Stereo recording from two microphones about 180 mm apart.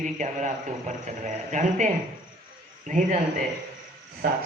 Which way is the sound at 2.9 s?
45° right (ahead or behind).